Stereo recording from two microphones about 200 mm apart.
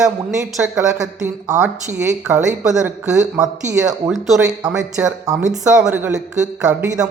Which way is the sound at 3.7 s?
15° right (ahead or behind).